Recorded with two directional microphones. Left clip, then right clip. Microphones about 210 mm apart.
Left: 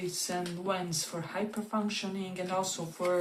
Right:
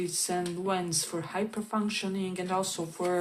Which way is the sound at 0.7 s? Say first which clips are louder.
Right 1 dB; 45° right (ahead or behind).